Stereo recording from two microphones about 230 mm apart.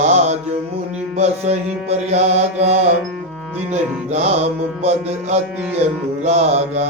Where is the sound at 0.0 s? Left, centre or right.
Right.